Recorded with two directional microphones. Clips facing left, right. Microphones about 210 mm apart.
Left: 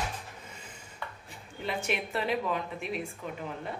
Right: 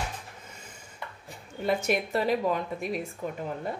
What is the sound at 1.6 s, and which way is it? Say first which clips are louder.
A woman's voice: right 6 dB; 40° right (ahead or behind).